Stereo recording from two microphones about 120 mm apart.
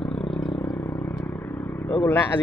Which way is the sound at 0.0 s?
5° left (ahead or behind).